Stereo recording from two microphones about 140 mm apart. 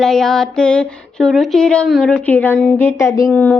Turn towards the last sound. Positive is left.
turn(degrees=15)  # may be behind; listen again after turning